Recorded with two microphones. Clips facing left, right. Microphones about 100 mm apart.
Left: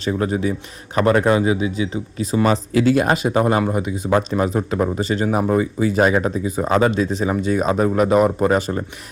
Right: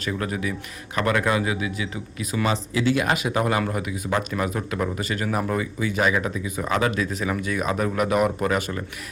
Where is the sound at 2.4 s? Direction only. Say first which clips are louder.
Left 6 dB; 45° left (ahead or behind).